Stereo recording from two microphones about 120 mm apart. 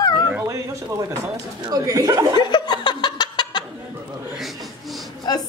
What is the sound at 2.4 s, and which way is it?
Laughter, 35° left (ahead or behind).